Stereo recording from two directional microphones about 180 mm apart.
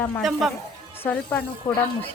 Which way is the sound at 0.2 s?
Centre (ahead or behind).